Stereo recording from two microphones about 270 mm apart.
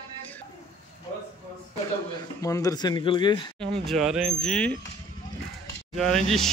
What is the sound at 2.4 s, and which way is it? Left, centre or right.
Speech, centre.